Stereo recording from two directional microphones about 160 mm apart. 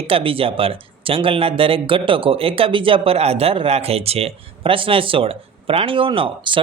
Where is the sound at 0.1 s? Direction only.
35° right (ahead or behind).